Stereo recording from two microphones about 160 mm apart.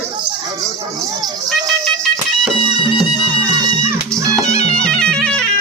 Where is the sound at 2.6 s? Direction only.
35° right (ahead or behind).